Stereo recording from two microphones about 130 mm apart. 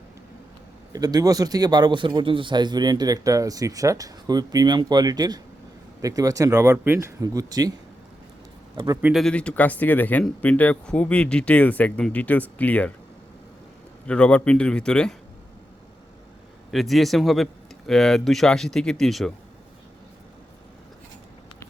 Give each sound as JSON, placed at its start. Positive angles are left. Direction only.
{"t": 0.9, "sound": "speech", "side_deg": -30}
{"t": 8.7, "sound": "a man's voice", "side_deg": -30}
{"t": 9.1, "sound": "speech", "side_deg": 5}
{"t": 14.1, "sound": "speech", "side_deg": 10}
{"t": 16.7, "sound": "speech", "side_deg": 0}